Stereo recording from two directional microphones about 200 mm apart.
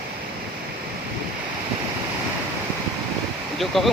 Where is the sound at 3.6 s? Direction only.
Centre (ahead or behind).